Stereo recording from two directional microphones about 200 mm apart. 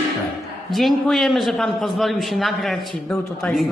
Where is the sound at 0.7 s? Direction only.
Centre (ahead or behind).